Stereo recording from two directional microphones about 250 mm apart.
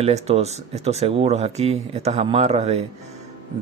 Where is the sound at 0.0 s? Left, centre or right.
Right.